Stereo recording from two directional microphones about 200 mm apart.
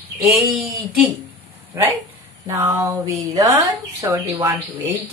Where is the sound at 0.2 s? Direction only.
Centre (ahead or behind).